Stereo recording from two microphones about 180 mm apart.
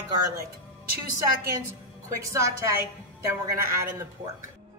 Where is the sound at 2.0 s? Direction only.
15° right (ahead or behind).